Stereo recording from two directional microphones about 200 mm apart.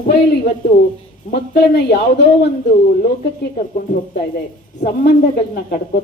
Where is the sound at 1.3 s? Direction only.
55° left (ahead or behind).